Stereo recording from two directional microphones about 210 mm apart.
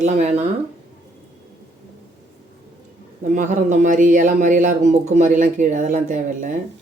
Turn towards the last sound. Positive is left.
turn(degrees=-35)  # may be behind; listen again after turning